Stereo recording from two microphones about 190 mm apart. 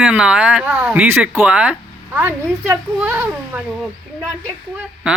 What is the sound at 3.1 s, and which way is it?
Speech, 10° right (ahead or behind).